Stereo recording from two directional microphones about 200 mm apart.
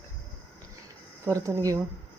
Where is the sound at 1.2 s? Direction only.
15° right (ahead or behind).